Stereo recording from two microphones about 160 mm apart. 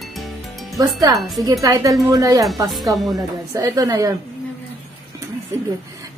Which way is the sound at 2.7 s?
Centre (ahead or behind).